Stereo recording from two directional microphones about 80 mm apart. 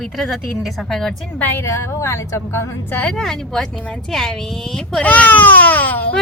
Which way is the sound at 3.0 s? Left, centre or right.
Centre.